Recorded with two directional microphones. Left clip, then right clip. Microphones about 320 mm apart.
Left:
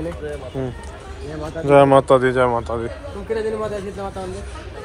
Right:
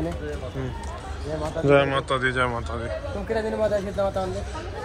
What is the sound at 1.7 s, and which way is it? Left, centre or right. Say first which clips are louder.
Speech: left 9 dB; centre.